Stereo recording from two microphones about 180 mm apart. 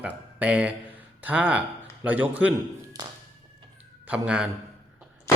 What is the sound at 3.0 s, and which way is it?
Tap, 20° right (ahead or behind).